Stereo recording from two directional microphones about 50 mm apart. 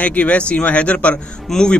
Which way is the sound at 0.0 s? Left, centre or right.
Left.